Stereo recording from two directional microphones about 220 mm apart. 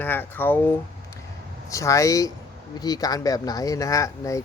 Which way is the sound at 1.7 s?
15° left (ahead or behind).